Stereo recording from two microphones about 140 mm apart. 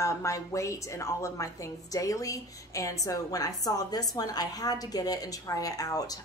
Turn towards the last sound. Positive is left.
turn(degrees=25)  # may be behind; listen again after turning